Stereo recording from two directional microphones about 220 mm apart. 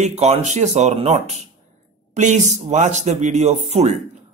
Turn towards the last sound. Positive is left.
turn(degrees=-30)  # may be behind; listen again after turning